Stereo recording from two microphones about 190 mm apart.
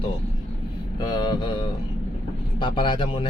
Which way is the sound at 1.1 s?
25° left (ahead or behind).